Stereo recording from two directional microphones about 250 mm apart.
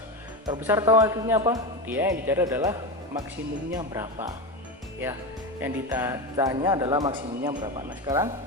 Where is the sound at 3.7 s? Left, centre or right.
Centre.